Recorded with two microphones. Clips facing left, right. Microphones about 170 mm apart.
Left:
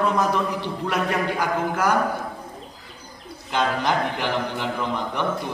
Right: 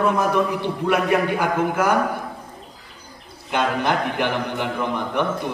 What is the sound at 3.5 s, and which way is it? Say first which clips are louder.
A man's voice: right 1 dB; 55° right (ahead or behind).